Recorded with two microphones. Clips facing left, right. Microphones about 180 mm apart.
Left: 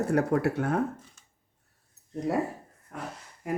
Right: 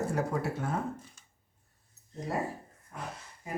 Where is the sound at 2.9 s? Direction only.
70° left (ahead or behind).